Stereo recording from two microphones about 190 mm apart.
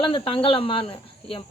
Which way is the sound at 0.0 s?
25° left (ahead or behind).